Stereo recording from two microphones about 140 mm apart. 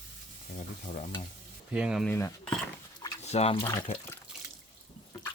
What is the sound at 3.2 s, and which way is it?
Speech, 50° left (ahead or behind).